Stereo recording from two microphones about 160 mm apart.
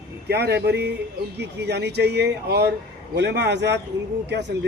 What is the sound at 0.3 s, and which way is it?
Speech, 90° right.